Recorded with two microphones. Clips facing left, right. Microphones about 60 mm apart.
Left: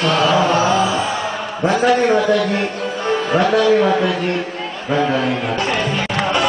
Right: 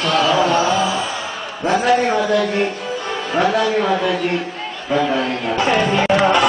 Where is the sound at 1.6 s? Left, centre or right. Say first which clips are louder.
Left 1 dB; left.